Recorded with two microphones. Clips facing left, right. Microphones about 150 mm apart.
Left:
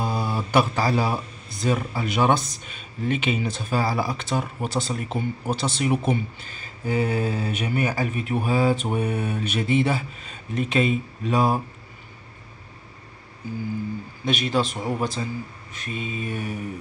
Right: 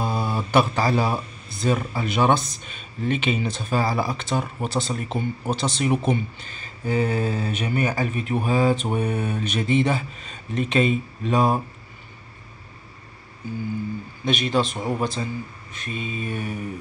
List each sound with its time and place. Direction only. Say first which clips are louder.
0.0 s a sound: right 1 dB; 10° left (ahead or behind)
0.5 s speech: right 1 dB; 10° left (ahead or behind)
14.2 s speech: right 1 dB; 5° left (ahead or behind)